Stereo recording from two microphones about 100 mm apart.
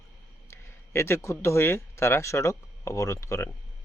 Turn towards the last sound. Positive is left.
turn(degrees=30)  # may be behind; listen again after turning